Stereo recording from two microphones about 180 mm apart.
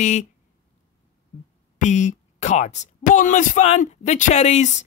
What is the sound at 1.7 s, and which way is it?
Speech, 40° left (ahead or behind).